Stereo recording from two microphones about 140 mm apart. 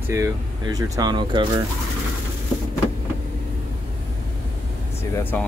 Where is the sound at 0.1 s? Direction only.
25° right (ahead or behind).